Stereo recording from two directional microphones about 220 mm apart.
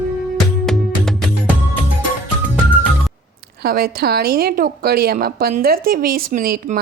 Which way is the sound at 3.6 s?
45° right (ahead or behind).